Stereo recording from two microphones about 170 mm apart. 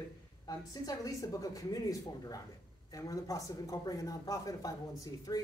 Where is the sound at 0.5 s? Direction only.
20° left (ahead or behind).